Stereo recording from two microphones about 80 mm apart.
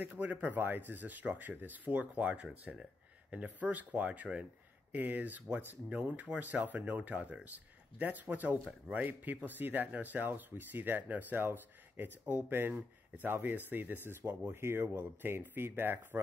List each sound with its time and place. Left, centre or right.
0.0 s speech: right